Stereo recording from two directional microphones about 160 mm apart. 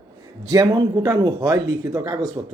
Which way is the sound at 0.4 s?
25° right (ahead or behind).